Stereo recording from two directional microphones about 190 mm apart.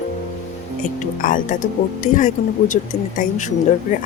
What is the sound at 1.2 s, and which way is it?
A woman's voice, 45° left (ahead or behind).